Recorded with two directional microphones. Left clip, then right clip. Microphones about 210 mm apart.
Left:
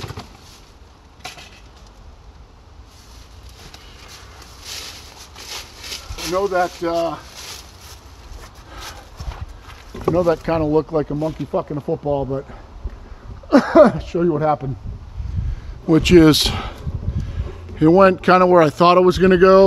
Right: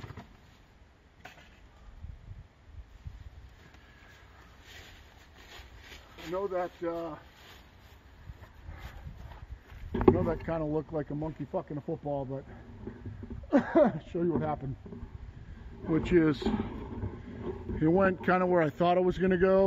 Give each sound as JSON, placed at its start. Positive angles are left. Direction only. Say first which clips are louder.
{"t": 6.1, "sound": "a sound", "louder": "left 14 dB", "side_deg": 40}
{"t": 6.9, "sound": "speech", "louder": "left 16 dB", "side_deg": 20}
{"t": 10.1, "sound": "speech", "louder": "left 15 dB", "side_deg": 20}
{"t": 10.5, "sound": "speech", "louder": "left 15 dB", "side_deg": 0}
{"t": 13.5, "sound": "speech", "louder": "left 14 dB", "side_deg": 10}
{"t": 15.9, "sound": "speech", "louder": "left 15 dB", "side_deg": 55}
{"t": 17.7, "sound": "speech", "louder": "left 15 dB", "side_deg": -5}